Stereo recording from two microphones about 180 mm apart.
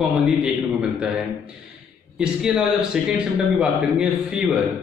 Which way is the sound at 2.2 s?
5° right (ahead or behind).